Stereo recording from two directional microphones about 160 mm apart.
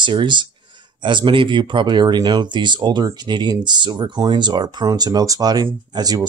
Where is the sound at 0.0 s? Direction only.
30° right (ahead or behind).